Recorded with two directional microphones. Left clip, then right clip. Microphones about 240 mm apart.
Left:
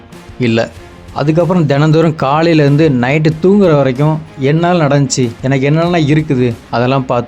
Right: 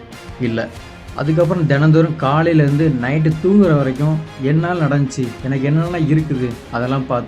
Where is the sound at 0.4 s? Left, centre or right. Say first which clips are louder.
Left 8 dB; left.